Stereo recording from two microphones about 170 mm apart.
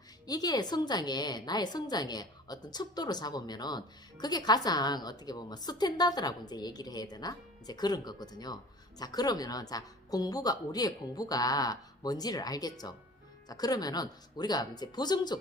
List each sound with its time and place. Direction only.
0.3 s a woman's voice: 20° left (ahead or behind)